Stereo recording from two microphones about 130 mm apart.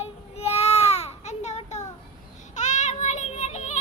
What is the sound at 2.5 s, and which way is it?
Child singing, 65° left (ahead or behind).